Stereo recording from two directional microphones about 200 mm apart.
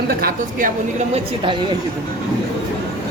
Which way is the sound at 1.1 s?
25° right (ahead or behind).